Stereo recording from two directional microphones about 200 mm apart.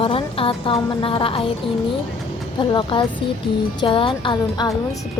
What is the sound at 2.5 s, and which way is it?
A woman's voice, 25° left (ahead or behind).